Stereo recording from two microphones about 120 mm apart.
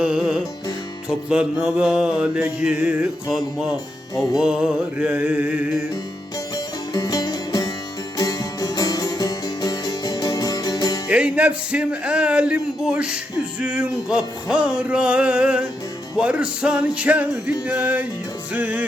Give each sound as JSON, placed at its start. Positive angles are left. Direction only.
{"t": 0.0, "sound": "music", "side_deg": -5}
{"t": 1.3, "sound": "speech", "side_deg": -10}
{"t": 3.2, "sound": "speech", "side_deg": -5}
{"t": 6.9, "sound": "music", "side_deg": 30}
{"t": 11.1, "sound": "speech", "side_deg": -10}